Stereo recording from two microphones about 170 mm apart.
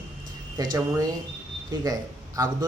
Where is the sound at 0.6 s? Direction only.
25° right (ahead or behind).